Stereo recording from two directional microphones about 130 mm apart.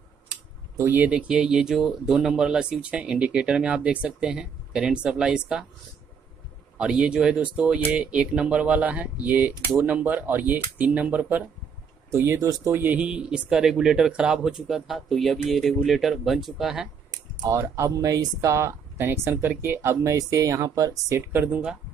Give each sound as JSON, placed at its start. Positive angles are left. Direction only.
{"t": 0.7, "sound": "speech", "side_deg": -15}
{"t": 6.8, "sound": "speech", "side_deg": -5}
{"t": 12.7, "sound": "speech", "side_deg": -15}
{"t": 17.4, "sound": "speech", "side_deg": -20}